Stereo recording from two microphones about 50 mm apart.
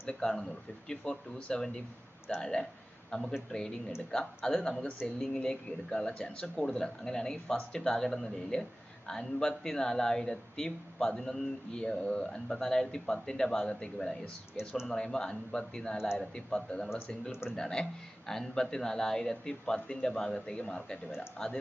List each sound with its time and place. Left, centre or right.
0.1 s speech: centre
20.6 s speech: left